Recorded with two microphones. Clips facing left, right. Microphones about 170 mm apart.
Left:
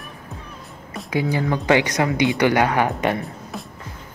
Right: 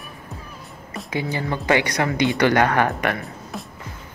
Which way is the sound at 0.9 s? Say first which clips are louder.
Left 4 dB; 10° left (ahead or behind).